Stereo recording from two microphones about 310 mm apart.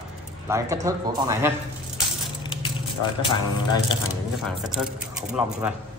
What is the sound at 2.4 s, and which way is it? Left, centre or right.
Speech, centre.